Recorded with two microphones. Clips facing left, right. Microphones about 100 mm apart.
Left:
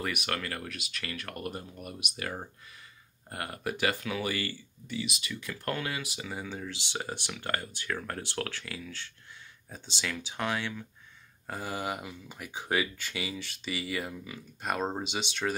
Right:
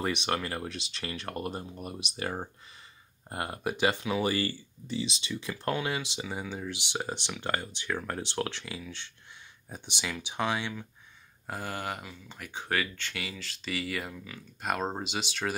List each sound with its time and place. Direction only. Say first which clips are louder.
0.0 s speech: right 3 dB; 25° right (ahead or behind)
4.3 s speech: right 4 dB; 35° right (ahead or behind); by 10.8 s 15° right (ahead or behind)
11.4 s speech: left 1 dB; centre (ahead or behind)